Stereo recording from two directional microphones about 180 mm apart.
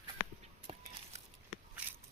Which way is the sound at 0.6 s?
40° right (ahead or behind).